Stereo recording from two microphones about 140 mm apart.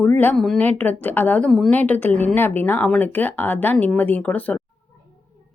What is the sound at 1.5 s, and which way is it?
A woman's voice, centre (ahead or behind).